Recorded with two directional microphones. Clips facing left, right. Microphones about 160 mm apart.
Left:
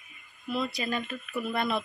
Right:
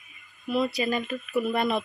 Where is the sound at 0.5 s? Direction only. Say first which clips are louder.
Right 5 dB; 10° right (ahead or behind).